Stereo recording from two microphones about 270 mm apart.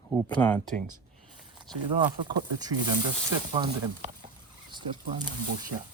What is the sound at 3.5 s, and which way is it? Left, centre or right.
Speech, centre.